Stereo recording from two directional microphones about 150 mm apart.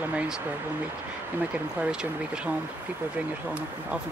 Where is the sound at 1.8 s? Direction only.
5° right (ahead or behind).